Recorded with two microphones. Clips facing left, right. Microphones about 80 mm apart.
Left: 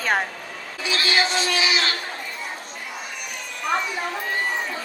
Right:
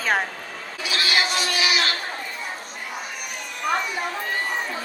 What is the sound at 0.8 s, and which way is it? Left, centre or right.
Speech, left.